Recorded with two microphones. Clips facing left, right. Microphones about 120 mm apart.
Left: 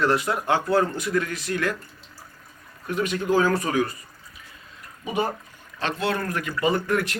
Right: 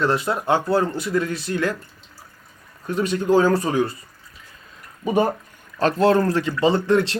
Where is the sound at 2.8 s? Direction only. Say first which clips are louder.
Right 4 dB; 30° right (ahead or behind).